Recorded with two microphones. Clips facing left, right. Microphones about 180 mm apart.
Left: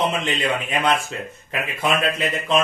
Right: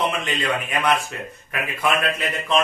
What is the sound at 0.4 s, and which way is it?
A man's voice, 25° left (ahead or behind).